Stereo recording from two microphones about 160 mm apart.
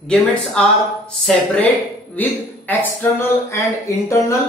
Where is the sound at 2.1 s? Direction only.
10° left (ahead or behind).